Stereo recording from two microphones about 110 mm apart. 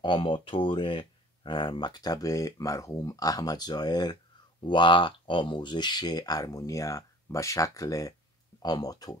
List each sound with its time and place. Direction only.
0.0 s speech: 50° left (ahead or behind)